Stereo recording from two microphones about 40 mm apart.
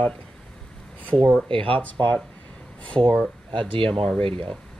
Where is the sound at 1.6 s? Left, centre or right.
Left.